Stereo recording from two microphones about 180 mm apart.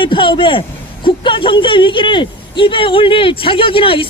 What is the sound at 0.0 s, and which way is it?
Speech, 30° left (ahead or behind).